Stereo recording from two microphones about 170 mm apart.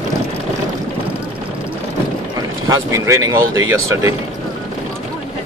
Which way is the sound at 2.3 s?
20° right (ahead or behind).